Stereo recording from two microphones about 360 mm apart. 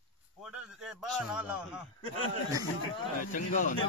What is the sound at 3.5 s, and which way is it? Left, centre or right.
Speech, left.